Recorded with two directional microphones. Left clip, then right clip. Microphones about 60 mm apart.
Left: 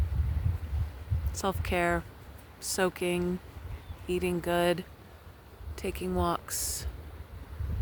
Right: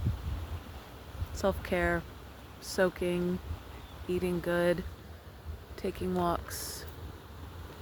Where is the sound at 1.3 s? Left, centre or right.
Left.